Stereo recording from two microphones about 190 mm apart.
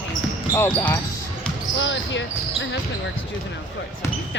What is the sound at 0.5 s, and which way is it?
Speech, 15° left (ahead or behind).